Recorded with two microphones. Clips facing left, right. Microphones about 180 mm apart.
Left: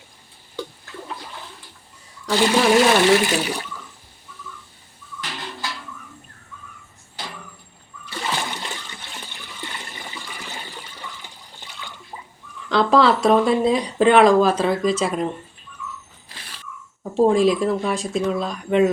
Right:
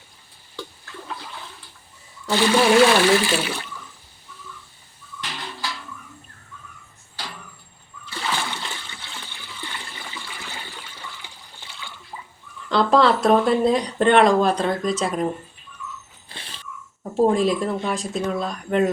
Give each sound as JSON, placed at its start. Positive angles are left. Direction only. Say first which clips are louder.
{"t": 2.4, "sound": "speech", "louder": "right 1 dB", "side_deg": 20}
{"t": 8.2, "sound": "splash", "louder": "left 1 dB", "side_deg": 20}
{"t": 8.8, "sound": "toilet flush", "louder": "left 2 dB", "side_deg": 40}
{"t": 9.6, "sound": "toilet flush", "louder": "left 1 dB", "side_deg": 20}
{"t": 12.6, "sound": "speech", "louder": "left 1 dB", "side_deg": 0}
{"t": 16.3, "sound": "a sound", "louder": "right 2 dB", "side_deg": -25}
{"t": 17.0, "sound": "speech", "louder": "left 2 dB", "side_deg": 0}